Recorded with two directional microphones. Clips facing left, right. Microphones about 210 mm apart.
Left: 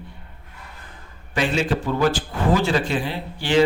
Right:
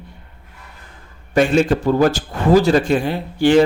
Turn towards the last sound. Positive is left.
turn(degrees=-50)  # may be behind; listen again after turning